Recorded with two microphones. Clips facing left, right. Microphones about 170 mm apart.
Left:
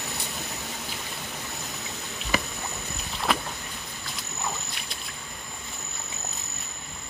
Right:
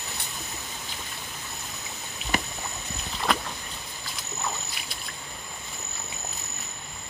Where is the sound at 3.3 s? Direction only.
Centre (ahead or behind).